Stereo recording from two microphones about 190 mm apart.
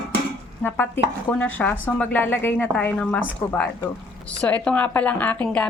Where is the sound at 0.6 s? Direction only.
10° left (ahead or behind).